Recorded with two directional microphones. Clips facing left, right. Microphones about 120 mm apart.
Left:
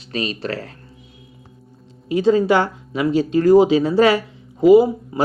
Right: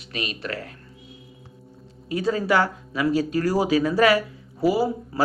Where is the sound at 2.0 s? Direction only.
25° left (ahead or behind).